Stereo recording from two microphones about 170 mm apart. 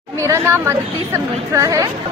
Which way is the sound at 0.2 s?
15° right (ahead or behind).